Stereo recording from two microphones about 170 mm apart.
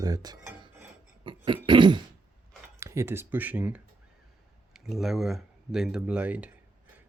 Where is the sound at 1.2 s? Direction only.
30° right (ahead or behind).